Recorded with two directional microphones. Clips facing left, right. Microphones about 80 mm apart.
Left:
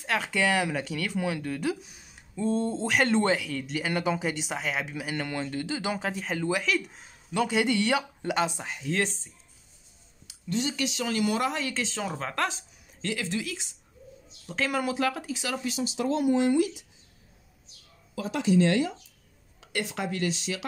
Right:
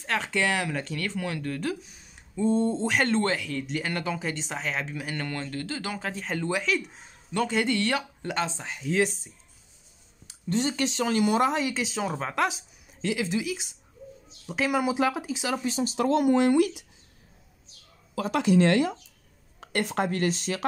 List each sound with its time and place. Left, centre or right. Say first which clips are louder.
0.0 s speech: even; centre
2.3 s speech: right 3 dB; centre
3.1 s speech: left 1 dB; centre
3.4 s speech: even; centre
6.2 s speech: right 1 dB; centre
7.4 s speech: left 1 dB; centre
8.7 s speech: right 6 dB; centre
10.2 s speech: right 3 dB; right
15.8 s speech: right 4 dB; right
16.1 s speech: right 2 dB; right
18.1 s speech: right 2 dB; right
19.6 s speech: right 5 dB; right